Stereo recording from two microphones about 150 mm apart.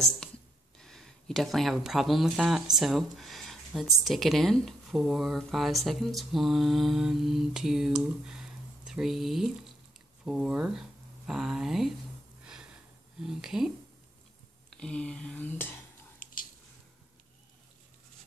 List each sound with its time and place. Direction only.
0.7 s speech: 5° left (ahead or behind)
13.2 s speech: 5° right (ahead or behind)
14.8 s speech: 5° left (ahead or behind)
16.2 s squish: 65° left (ahead or behind)